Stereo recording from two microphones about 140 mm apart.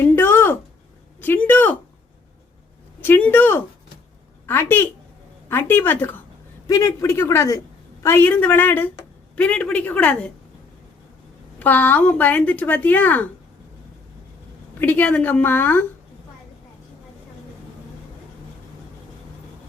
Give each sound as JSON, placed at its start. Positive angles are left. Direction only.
{"t": 0.0, "sound": "a sound", "side_deg": 15}
{"t": 3.0, "sound": "a woman's voice", "side_deg": 10}
{"t": 11.6, "sound": "a woman's voice", "side_deg": 10}
{"t": 14.8, "sound": "a woman's voice", "side_deg": 15}